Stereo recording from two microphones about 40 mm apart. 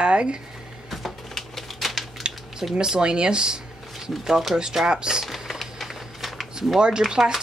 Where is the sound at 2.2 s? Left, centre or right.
Centre.